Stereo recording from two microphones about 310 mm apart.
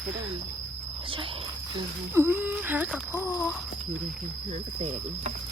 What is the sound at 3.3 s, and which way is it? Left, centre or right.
Speech, centre.